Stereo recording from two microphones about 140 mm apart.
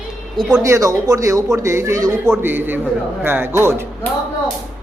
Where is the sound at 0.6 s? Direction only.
25° right (ahead or behind).